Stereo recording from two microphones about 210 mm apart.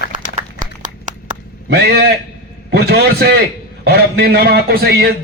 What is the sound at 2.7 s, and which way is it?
A man's voice, 50° right (ahead or behind).